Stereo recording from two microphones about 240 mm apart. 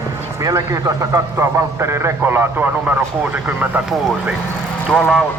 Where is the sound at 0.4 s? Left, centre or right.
Centre.